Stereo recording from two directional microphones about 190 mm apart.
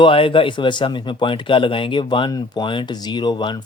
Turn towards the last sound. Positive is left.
turn(degrees=25)  # may be behind; listen again after turning